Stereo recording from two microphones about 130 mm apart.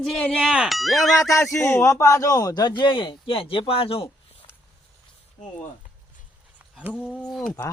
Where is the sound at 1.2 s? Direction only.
25° left (ahead or behind); by 4.1 s 45° left (ahead or behind).